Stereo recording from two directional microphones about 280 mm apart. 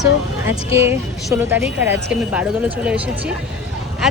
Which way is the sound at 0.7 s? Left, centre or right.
Centre.